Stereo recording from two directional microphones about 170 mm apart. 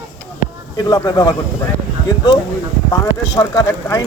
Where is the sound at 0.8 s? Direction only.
25° left (ahead or behind).